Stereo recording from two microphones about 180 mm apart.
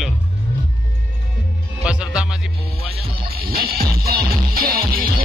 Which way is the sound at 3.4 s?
55° right (ahead or behind).